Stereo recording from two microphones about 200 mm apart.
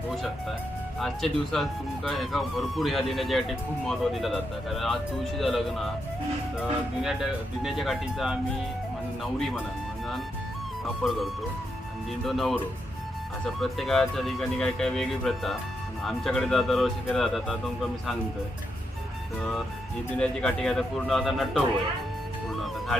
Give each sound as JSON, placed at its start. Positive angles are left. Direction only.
{"t": 0.9, "sound": "speech", "side_deg": 0}
{"t": 11.0, "sound": "speech", "side_deg": 5}
{"t": 12.2, "sound": "speech", "side_deg": 0}
{"t": 13.6, "sound": "speech", "side_deg": 0}
{"t": 20.1, "sound": "speech", "side_deg": 5}
{"t": 22.4, "sound": "music", "side_deg": 0}